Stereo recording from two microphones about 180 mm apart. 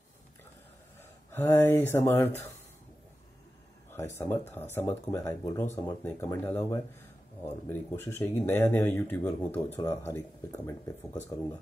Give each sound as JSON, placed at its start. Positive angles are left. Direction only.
{"t": 1.3, "sound": "speech", "side_deg": 10}
{"t": 3.9, "sound": "speech", "side_deg": 15}